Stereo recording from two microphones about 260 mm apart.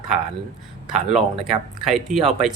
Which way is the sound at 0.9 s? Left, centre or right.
Centre.